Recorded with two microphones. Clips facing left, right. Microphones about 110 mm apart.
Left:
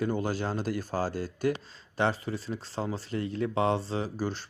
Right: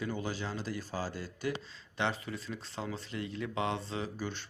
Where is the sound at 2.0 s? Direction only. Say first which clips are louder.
Left 6 dB; 35° left (ahead or behind).